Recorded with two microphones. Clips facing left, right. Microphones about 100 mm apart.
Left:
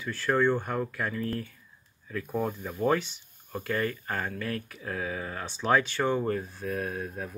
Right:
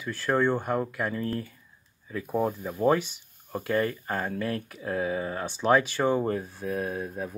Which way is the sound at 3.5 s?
25° right (ahead or behind).